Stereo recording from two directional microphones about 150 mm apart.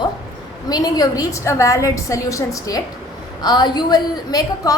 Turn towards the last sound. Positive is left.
turn(degrees=25)  # may be behind; listen again after turning